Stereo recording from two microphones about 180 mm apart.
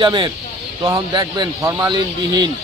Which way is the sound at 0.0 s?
25° right (ahead or behind).